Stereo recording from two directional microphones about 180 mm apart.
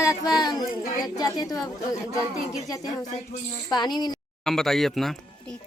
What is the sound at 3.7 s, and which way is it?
Speech, 25° left (ahead or behind).